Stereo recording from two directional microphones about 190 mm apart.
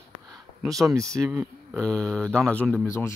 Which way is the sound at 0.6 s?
Centre (ahead or behind).